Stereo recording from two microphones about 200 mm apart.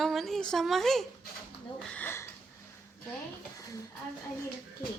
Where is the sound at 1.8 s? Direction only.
5° left (ahead or behind).